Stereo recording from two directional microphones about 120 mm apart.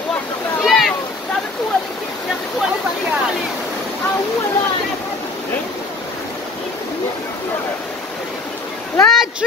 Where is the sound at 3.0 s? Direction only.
5° right (ahead or behind).